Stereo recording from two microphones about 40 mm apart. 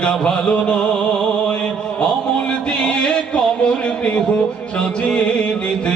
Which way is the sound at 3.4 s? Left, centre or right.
Left.